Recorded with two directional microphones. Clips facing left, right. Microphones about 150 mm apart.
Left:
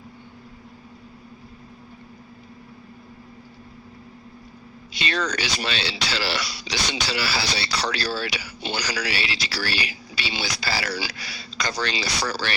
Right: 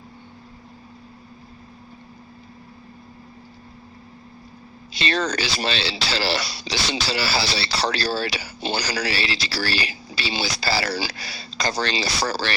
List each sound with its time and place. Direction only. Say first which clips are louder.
4.9 s speech: right 3 dB; 30° right (ahead or behind)